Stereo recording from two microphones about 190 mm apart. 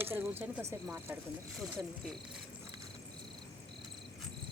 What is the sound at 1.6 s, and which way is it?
Speech, centre (ahead or behind).